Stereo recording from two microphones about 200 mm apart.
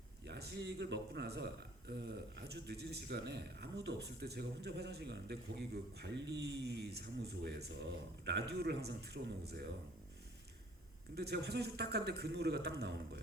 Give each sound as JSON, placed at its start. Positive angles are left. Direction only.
{"t": 0.3, "sound": "a man's voice", "side_deg": -55}
{"t": 11.1, "sound": "a man's voice", "side_deg": -55}